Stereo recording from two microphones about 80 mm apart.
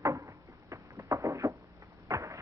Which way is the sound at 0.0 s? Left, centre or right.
Right.